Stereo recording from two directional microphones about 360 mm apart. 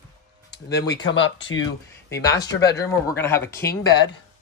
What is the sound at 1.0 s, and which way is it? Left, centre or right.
Speech, left.